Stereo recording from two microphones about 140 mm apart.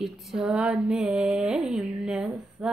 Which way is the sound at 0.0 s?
5° right (ahead or behind).